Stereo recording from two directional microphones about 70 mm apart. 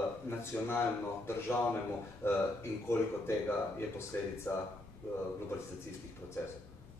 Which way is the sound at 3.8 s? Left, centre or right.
Left.